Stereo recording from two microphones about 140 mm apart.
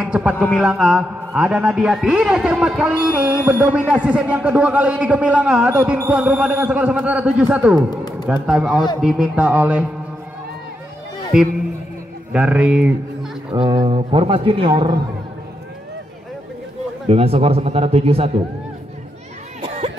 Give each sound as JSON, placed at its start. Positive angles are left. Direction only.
{"t": 0.0, "sound": "a man's voice", "side_deg": -10}
{"t": 11.3, "sound": "a man's voice", "side_deg": -5}
{"t": 13.5, "sound": "speech", "side_deg": -35}
{"t": 17.1, "sound": "speech", "side_deg": -45}